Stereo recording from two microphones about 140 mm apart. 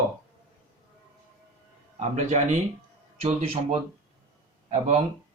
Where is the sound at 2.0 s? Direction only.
55° right (ahead or behind).